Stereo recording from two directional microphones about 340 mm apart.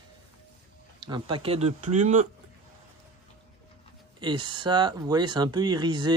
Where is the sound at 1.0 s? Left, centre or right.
Centre.